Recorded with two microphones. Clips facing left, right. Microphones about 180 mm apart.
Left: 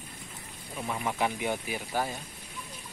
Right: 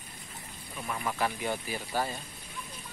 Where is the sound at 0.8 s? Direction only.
15° left (ahead or behind).